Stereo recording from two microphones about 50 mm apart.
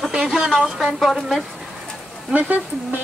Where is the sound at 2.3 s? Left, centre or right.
Right.